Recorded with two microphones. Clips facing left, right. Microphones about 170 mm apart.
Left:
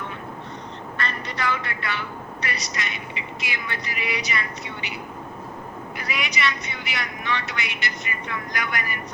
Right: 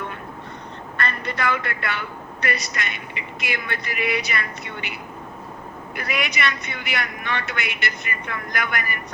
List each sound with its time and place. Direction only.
0.9 s a man's voice: 55° right (ahead or behind)
6.0 s a man's voice: 55° right (ahead or behind)